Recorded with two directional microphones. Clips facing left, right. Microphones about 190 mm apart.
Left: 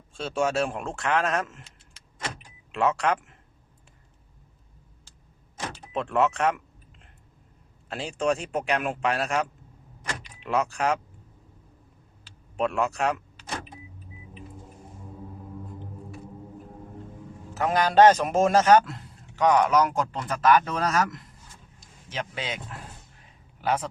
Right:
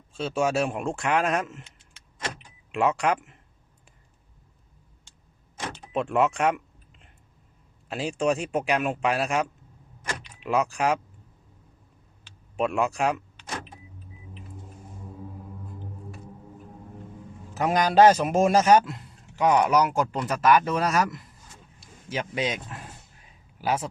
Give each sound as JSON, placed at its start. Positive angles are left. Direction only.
{"t": 0.1, "sound": "speech", "side_deg": 0}
{"t": 2.7, "sound": "speech", "side_deg": -10}
{"t": 5.9, "sound": "speech", "side_deg": -10}
{"t": 7.9, "sound": "speech", "side_deg": -5}
{"t": 12.5, "sound": "speech", "side_deg": -5}
{"t": 17.5, "sound": "speech", "side_deg": -15}
{"t": 18.9, "sound": "a sound", "side_deg": 0}
{"t": 19.5, "sound": "speech", "side_deg": -10}